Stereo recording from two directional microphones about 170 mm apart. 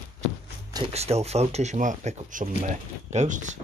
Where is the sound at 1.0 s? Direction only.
40° right (ahead or behind).